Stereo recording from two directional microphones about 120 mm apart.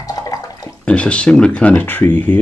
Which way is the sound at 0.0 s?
30° left (ahead or behind).